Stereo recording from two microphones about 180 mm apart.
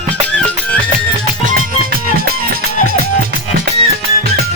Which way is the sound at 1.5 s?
50° right (ahead or behind).